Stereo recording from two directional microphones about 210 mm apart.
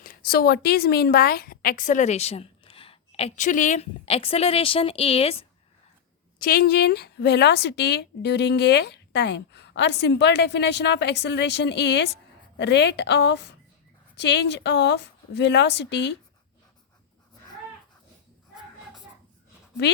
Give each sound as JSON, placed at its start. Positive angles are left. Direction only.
{"t": 0.0, "sound": "a woman's voice", "side_deg": 45}
{"t": 6.4, "sound": "a woman's voice", "side_deg": 45}